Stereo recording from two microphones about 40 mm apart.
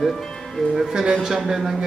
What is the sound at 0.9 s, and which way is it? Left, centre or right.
Speech, centre.